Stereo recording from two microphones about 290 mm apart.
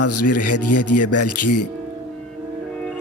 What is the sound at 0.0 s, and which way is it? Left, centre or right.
Speech, left.